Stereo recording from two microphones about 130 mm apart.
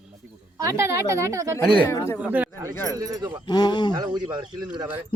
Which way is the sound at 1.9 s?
20° left (ahead or behind).